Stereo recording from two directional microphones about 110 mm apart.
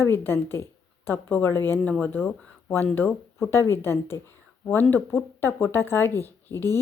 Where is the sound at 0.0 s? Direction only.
20° left (ahead or behind).